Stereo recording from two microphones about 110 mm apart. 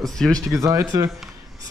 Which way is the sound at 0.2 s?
5° left (ahead or behind).